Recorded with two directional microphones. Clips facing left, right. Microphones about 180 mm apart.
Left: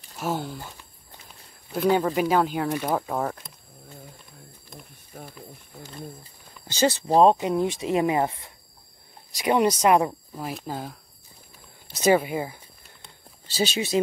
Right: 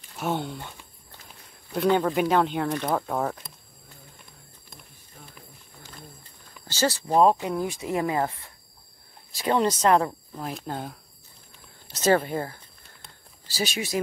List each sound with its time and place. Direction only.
0.2 s speech: centre (ahead or behind)
6.7 s speech: 20° left (ahead or behind)
13.5 s speech: 25° left (ahead or behind)